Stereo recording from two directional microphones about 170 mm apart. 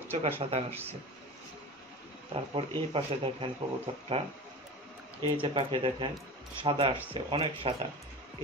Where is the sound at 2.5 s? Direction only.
30° right (ahead or behind).